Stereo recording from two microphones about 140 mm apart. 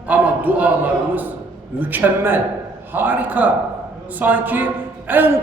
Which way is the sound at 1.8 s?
15° right (ahead or behind).